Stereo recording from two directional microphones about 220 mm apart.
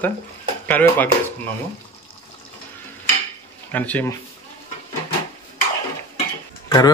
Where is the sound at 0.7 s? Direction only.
10° left (ahead or behind).